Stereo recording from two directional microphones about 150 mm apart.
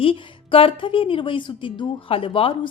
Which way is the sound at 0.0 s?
35° left (ahead or behind).